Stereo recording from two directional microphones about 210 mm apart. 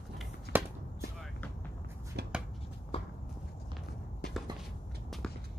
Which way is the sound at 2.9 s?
30° left (ahead or behind).